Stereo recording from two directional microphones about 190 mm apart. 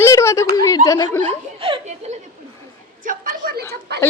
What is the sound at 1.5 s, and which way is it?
Chuckle, 30° right (ahead or behind).